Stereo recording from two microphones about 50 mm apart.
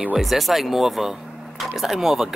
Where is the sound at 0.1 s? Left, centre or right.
Centre.